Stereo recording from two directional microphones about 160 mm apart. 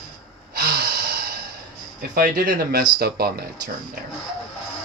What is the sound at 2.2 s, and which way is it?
Speech, 60° right (ahead or behind).